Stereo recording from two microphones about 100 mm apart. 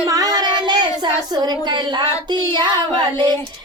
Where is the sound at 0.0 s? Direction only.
35° right (ahead or behind).